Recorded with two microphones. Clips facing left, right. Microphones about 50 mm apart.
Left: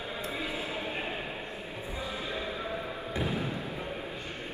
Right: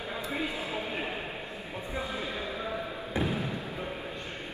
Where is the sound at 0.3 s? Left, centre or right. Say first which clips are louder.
Right 2 dB; right.